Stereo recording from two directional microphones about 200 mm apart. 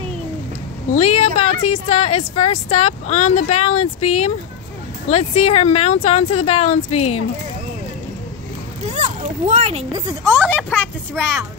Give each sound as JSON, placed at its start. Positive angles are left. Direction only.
{"t": 0.9, "sound": "a woman's voice", "side_deg": 35}
{"t": 8.8, "sound": "a sound", "side_deg": -35}
{"t": 10.0, "sound": "speech", "side_deg": -10}
{"t": 10.4, "sound": "speech", "side_deg": 5}